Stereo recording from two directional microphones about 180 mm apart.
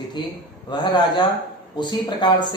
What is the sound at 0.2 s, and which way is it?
Speech, 25° left (ahead or behind).